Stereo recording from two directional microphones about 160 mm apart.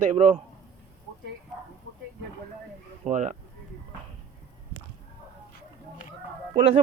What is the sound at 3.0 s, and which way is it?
Speech, 50° right (ahead or behind).